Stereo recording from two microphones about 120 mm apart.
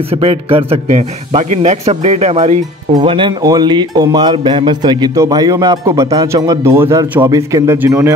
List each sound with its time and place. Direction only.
0.1 s a man's voice: 55° right (ahead or behind)
0.8 s speech: 75° right (ahead or behind)
3.1 s a man's voice: 45° right (ahead or behind); by 7.9 s 20° right (ahead or behind)